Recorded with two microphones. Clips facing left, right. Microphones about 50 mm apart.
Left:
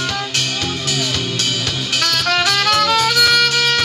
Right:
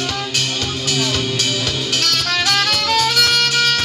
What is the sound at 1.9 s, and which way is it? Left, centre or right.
Music, centre.